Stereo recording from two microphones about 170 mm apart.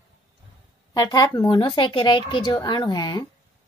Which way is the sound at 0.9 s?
25° left (ahead or behind).